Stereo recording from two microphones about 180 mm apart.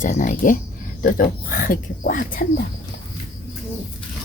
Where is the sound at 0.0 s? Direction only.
45° left (ahead or behind).